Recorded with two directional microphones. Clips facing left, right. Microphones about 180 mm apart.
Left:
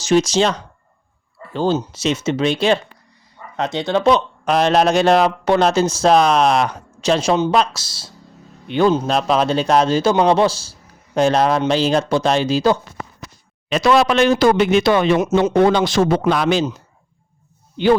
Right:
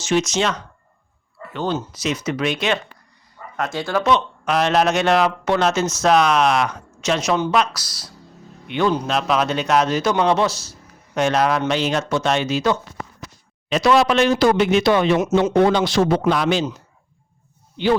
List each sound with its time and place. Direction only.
0.0 s speech: 35° left (ahead or behind)
3.6 s speech: 20° left (ahead or behind)
4.0 s a man's voice: 35° left (ahead or behind)
13.7 s speech: 55° left (ahead or behind)
15.2 s speech: 35° left (ahead or behind)
15.5 s speech: 50° left (ahead or behind)